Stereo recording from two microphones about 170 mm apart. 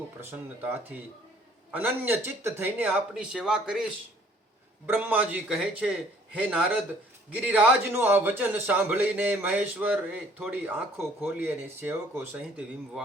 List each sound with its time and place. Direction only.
0.2 s a man's voice: 15° right (ahead or behind)
4.9 s a man's voice: 10° right (ahead or behind)